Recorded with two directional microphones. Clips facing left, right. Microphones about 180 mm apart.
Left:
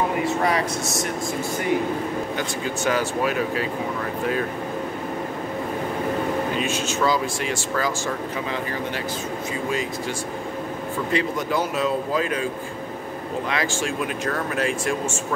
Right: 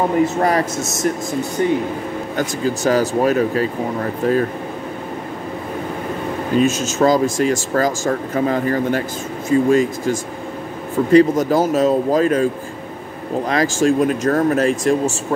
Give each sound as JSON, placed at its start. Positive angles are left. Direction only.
{"t": 0.4, "sound": "speech", "side_deg": -45}
{"t": 1.6, "sound": "speech", "side_deg": -30}
{"t": 6.5, "sound": "speech", "side_deg": -45}
{"t": 13.5, "sound": "speech", "side_deg": -40}